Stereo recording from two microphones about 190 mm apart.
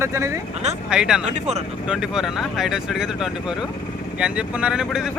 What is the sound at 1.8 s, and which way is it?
Speech, centre (ahead or behind).